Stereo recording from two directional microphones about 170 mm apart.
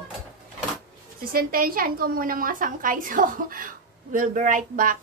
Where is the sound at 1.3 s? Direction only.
60° right (ahead or behind).